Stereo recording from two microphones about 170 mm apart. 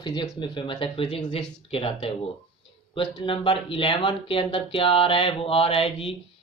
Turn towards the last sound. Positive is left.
turn(degrees=35)  # may be behind; listen again after turning